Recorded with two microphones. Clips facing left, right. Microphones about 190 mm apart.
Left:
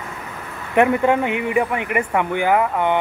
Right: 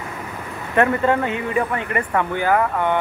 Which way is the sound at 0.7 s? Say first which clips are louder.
Left 2 dB; 15° left (ahead or behind).